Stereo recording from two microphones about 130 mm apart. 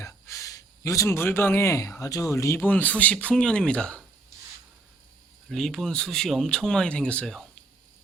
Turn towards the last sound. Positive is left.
turn(degrees=5)  # may be behind; listen again after turning